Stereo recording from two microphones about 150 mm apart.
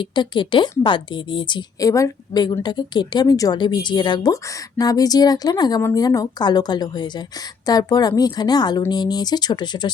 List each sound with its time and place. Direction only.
0.0 s a woman's voice: 30° left (ahead or behind)